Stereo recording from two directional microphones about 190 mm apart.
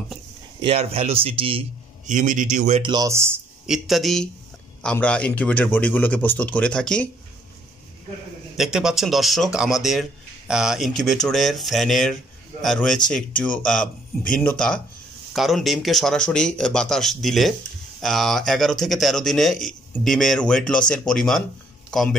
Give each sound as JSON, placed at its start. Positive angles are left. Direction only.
{"t": 0.6, "sound": "speech", "side_deg": -30}
{"t": 2.0, "sound": "a man's voice", "side_deg": -40}
{"t": 2.8, "sound": "speech", "side_deg": -20}
{"t": 3.6, "sound": "a man's voice", "side_deg": 0}
{"t": 8.5, "sound": "a man's voice", "side_deg": -5}